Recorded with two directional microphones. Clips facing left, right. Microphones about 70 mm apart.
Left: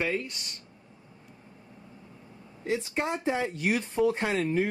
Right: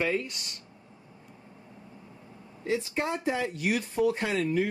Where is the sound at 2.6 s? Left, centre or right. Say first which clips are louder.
Even; left.